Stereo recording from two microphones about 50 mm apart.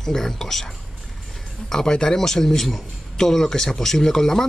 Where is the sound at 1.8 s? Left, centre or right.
Centre.